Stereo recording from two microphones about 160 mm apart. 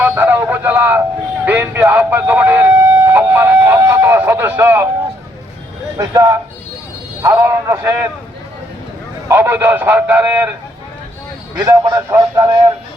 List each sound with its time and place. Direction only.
0.0 s a sound: 10° right (ahead or behind)
1.5 s siren: 10° right (ahead or behind)
6.0 s a man's voice: 20° right (ahead or behind)
9.3 s a man's voice: 15° right (ahead or behind)
11.5 s a man's voice: 20° right (ahead or behind)